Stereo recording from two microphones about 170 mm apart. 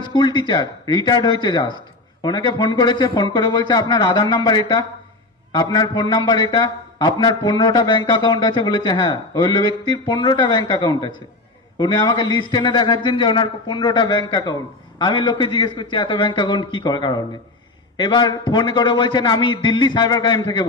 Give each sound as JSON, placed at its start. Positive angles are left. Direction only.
{"t": 0.1, "sound": "a man's voice", "side_deg": 25}